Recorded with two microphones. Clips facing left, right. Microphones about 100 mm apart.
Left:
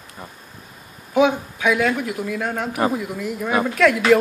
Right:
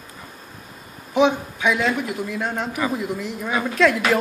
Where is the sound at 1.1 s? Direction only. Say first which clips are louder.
Left 1 dB; 5° left (ahead or behind).